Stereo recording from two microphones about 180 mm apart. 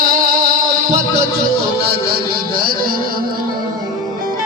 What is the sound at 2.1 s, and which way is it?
Music, 55° right (ahead or behind).